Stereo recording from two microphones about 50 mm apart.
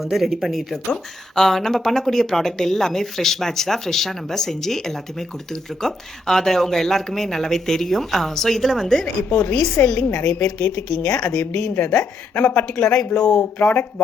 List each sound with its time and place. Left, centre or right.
0.0 s speech: centre
9.3 s a woman's voice: left
9.8 s a woman's voice: left
10.4 s a woman's voice: left
13.1 s speech: centre
13.4 s speech: left